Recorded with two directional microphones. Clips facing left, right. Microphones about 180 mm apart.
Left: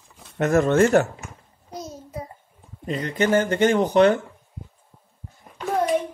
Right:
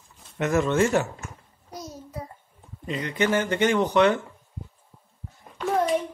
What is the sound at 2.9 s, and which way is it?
Speech, 40° left (ahead or behind).